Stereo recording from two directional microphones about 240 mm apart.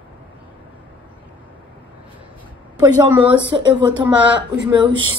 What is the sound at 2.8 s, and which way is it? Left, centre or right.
Speech, centre.